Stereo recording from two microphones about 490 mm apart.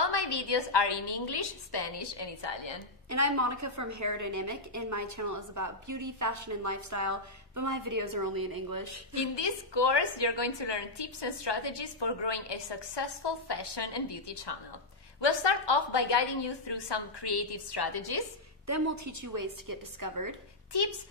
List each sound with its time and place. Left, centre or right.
0.0 s a woman's voice: left
3.1 s a woman's voice: right
9.1 s a woman's voice: left
18.7 s a woman's voice: right
20.7 s a woman's voice: left